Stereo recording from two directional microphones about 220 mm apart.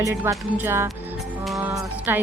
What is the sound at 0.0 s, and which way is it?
Speech, 10° right (ahead or behind).